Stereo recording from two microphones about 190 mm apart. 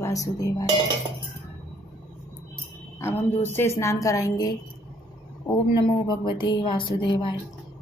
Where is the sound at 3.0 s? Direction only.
10° left (ahead or behind).